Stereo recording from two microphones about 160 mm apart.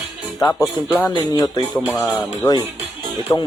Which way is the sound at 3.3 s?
25° left (ahead or behind).